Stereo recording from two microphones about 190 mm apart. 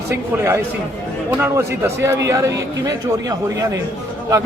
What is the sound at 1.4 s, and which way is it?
A man's voice, 15° right (ahead or behind).